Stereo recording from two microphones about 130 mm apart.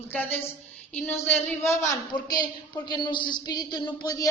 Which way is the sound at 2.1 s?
35° left (ahead or behind).